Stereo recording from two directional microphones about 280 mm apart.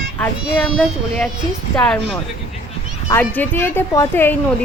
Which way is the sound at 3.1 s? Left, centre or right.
Centre.